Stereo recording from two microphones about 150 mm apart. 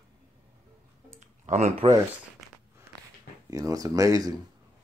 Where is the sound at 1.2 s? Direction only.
50° right (ahead or behind).